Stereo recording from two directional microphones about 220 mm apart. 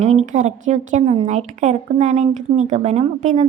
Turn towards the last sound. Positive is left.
turn(degrees=-35)  # may be behind; listen again after turning